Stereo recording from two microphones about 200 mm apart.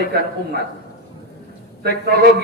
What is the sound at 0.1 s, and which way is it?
Speech, 55° right (ahead or behind).